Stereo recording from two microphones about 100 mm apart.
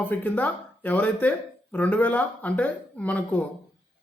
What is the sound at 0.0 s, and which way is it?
Speech, 15° left (ahead or behind).